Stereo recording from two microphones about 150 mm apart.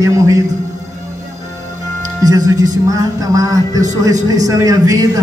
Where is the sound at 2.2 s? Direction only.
25° right (ahead or behind).